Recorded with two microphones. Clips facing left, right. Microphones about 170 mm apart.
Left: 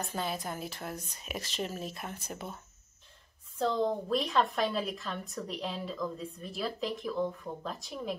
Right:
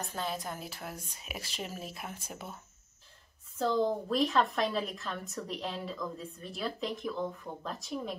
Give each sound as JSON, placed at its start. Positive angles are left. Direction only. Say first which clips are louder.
{"t": 0.1, "sound": "a woman's voice", "louder": "left 1 dB", "side_deg": 5}